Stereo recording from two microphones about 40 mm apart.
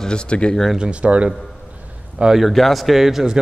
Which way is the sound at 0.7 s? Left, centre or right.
Right.